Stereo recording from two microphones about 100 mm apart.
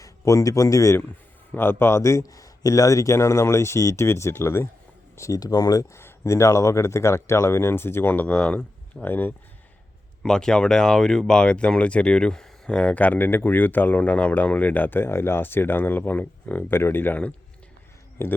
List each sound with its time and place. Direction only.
0.0 s speech: 35° left (ahead or behind)
5.9 s speech: 25° left (ahead or behind)
10.2 s speech: 5° left (ahead or behind); by 18.3 s 25° left (ahead or behind)